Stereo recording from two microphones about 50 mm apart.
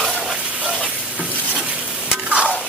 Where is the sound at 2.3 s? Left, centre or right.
Right.